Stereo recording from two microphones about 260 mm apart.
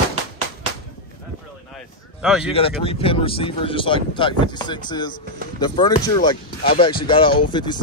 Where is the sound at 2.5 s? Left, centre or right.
Left.